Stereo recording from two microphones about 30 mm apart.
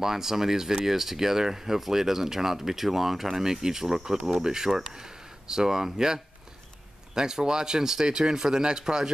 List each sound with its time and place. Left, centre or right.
0.0 s speech: centre